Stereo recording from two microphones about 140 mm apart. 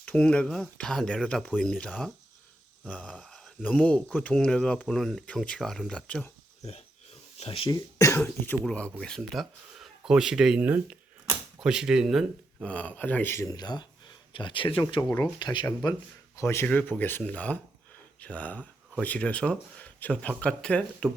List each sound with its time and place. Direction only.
0.0 s speech: 5° left (ahead or behind)
1.9 s speech: 5° right (ahead or behind)
2.8 s speech: 10° left (ahead or behind)
7.3 s speech: 40° left (ahead or behind)
7.9 s cough: 20° left (ahead or behind)
8.6 s speech: 5° left (ahead or behind)
12.6 s speech: 10° left (ahead or behind)
13.6 s speech: 30° left (ahead or behind); by 21.1 s 5° left (ahead or behind)